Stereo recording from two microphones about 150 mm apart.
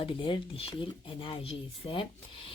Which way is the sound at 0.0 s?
35° left (ahead or behind).